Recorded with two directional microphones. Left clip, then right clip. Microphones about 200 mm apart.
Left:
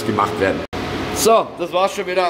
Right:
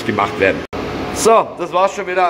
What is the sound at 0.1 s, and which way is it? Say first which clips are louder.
A man's voice: right 3 dB; centre (ahead or behind).